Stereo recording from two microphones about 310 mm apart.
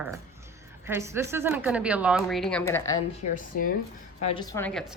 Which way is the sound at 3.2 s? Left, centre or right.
Left.